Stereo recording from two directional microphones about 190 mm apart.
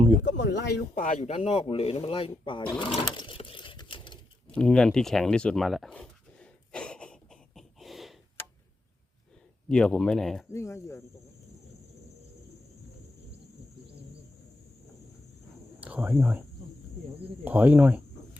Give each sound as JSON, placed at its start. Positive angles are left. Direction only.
{"t": 0.3, "sound": "speech", "side_deg": 65}
{"t": 1.3, "sound": "speech", "side_deg": 30}
{"t": 4.5, "sound": "dog", "side_deg": 5}
{"t": 9.6, "sound": "speech", "side_deg": 5}
{"t": 10.5, "sound": "speech", "side_deg": 15}
{"t": 15.8, "sound": "speech", "side_deg": -10}
{"t": 17.4, "sound": "speech", "side_deg": -10}